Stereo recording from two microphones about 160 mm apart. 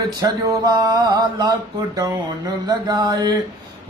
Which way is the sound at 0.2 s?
25° right (ahead or behind).